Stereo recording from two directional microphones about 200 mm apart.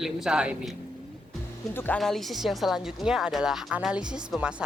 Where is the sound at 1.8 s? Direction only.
5° left (ahead or behind).